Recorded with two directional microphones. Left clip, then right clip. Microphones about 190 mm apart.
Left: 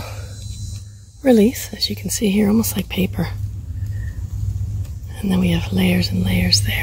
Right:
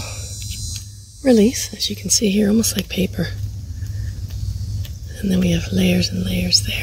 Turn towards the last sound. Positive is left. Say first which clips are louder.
# even
turn(degrees=0)  # may be behind; listen again after turning